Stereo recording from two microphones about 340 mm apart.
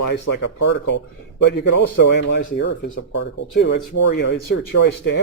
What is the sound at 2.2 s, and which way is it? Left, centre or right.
Speech, left.